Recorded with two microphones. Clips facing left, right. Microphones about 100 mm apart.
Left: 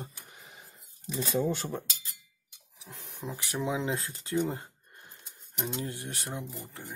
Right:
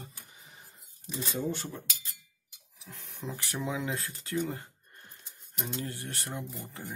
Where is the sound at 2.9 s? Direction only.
15° left (ahead or behind).